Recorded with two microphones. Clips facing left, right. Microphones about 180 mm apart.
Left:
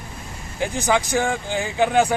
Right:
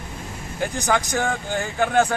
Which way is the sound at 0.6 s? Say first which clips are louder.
Left 2 dB; 10° left (ahead or behind).